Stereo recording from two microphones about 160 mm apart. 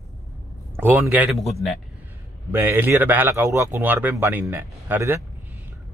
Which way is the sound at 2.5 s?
15° right (ahead or behind).